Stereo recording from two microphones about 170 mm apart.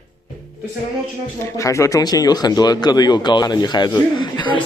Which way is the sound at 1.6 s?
20° left (ahead or behind).